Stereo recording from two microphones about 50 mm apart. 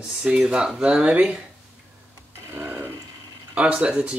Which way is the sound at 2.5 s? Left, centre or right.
Right.